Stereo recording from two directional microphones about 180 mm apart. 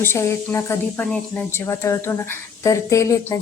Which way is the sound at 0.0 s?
15° left (ahead or behind).